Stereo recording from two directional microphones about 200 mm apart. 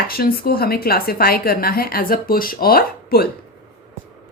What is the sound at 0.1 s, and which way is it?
A woman's voice, 50° left (ahead or behind).